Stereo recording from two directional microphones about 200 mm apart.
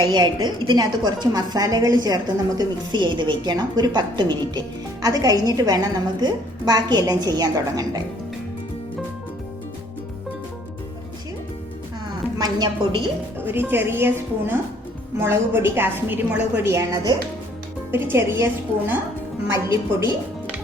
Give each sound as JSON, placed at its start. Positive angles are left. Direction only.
{"t": 0.1, "sound": "a woman's voice", "side_deg": -20}
{"t": 12.4, "sound": "a woman's voice", "side_deg": -20}
{"t": 13.4, "sound": "a woman's voice", "side_deg": -10}